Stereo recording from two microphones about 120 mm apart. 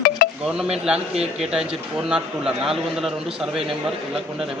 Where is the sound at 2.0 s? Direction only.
5° right (ahead or behind).